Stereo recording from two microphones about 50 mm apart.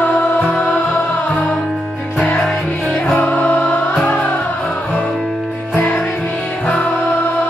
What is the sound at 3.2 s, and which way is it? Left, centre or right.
Music, left.